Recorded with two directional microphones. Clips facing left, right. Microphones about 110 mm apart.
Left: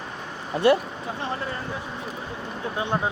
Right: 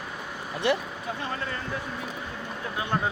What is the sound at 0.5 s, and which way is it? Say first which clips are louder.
Speech: left 7 dB; 35° left (ahead or behind).